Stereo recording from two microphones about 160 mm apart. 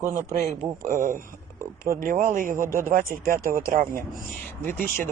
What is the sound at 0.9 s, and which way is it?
Speech, 55° right (ahead or behind).